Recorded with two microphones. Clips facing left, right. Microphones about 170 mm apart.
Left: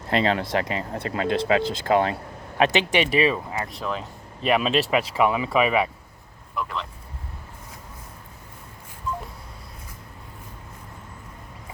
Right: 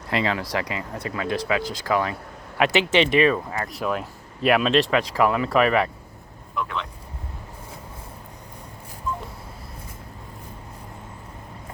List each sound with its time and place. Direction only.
0.1 s speech: 25° left (ahead or behind)
2.6 s speech: 15° left (ahead or behind)
3.7 s speech: 5° right (ahead or behind)